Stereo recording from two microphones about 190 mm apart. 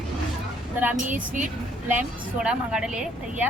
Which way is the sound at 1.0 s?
45° right (ahead or behind).